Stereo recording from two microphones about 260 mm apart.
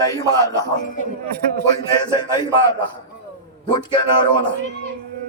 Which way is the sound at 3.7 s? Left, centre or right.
Centre.